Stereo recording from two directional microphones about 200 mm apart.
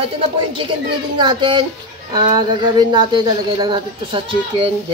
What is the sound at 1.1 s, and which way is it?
A woman's voice, 25° right (ahead or behind).